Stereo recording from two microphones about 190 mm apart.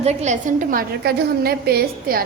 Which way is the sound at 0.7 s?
55° right (ahead or behind).